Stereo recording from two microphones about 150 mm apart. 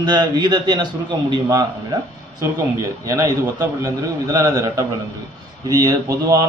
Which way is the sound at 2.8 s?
20° right (ahead or behind).